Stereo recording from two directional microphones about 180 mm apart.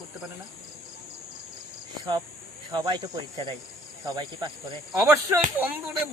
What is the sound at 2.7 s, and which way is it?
Speech, 20° right (ahead or behind).